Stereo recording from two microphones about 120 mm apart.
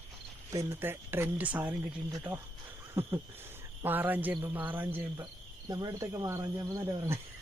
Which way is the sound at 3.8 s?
15° right (ahead or behind).